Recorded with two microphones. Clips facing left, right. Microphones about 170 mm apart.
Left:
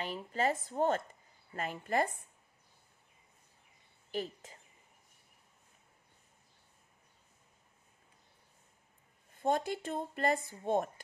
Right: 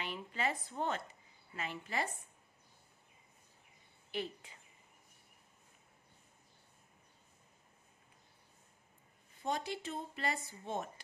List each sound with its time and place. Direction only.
0.0 s speech: 40° left (ahead or behind)
4.1 s speech: 40° left (ahead or behind)
9.4 s speech: 50° left (ahead or behind)